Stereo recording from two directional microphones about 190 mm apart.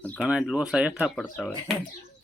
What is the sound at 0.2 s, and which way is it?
Speech, 5° right (ahead or behind).